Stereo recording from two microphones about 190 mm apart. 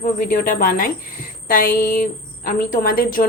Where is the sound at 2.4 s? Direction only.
45° left (ahead or behind).